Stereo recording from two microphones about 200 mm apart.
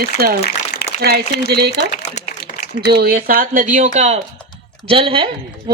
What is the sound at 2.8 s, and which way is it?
Speech, 50° right (ahead or behind).